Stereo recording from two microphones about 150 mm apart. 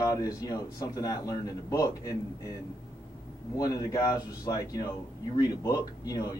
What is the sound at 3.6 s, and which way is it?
A man's voice, 20° left (ahead or behind).